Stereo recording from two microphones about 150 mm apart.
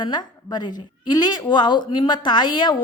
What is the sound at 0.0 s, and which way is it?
A woman's voice, 30° left (ahead or behind).